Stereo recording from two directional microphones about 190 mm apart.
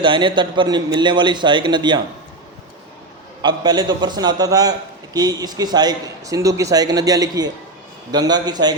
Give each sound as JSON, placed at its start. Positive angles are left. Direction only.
{"t": 0.0, "sound": "a man's voice", "side_deg": -25}
{"t": 3.4, "sound": "a man's voice", "side_deg": -20}